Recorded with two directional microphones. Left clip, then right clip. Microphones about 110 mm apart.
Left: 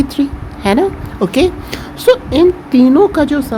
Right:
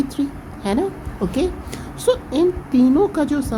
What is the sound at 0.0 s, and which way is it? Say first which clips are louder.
A woman's voice: left 7 dB; 50° left (ahead or behind).